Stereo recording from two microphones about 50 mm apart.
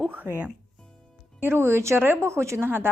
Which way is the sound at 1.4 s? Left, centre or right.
Right.